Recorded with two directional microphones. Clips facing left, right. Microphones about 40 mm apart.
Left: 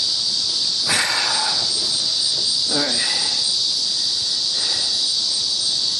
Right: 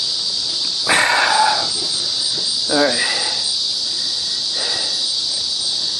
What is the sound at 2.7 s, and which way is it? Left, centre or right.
Cricket, right.